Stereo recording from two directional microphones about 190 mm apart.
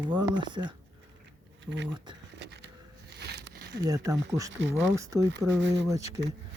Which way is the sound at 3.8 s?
20° right (ahead or behind).